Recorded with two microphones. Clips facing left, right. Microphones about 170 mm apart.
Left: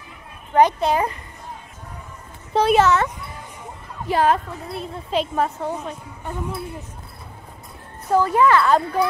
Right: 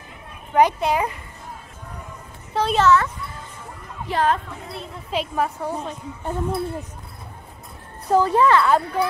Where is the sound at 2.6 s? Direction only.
10° left (ahead or behind).